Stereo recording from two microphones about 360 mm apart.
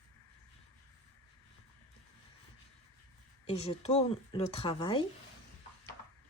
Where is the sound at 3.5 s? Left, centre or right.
Centre.